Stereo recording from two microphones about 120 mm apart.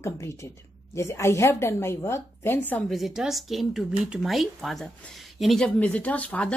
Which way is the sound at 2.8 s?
Centre (ahead or behind).